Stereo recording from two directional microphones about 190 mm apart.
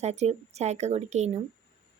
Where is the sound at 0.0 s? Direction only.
35° right (ahead or behind).